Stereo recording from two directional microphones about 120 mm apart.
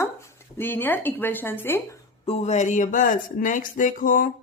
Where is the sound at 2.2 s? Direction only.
60° left (ahead or behind).